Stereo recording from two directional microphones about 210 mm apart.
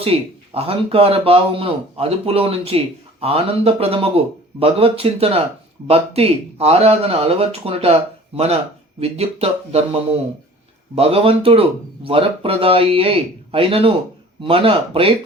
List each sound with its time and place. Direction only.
0.0 s speech: 25° right (ahead or behind)
9.0 s speech: 30° right (ahead or behind)